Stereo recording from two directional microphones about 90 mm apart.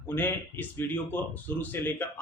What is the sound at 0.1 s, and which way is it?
A man's voice, 20° left (ahead or behind).